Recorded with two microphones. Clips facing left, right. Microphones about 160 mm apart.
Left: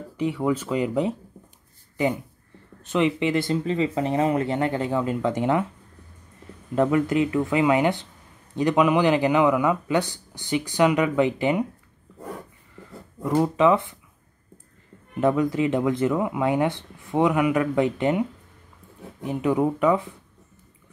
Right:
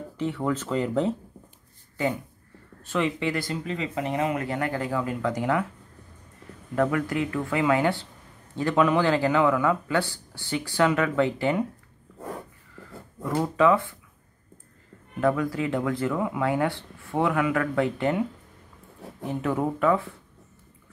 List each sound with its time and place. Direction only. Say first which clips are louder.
0.2 s speech: left 3 dB; 10° left (ahead or behind)
6.7 s speech: left 4 dB; 20° left (ahead or behind)
13.2 s speech: left 3 dB; 15° left (ahead or behind)
15.1 s speech: left 3 dB; 20° left (ahead or behind)
19.2 s speech: left 4 dB; 15° left (ahead or behind)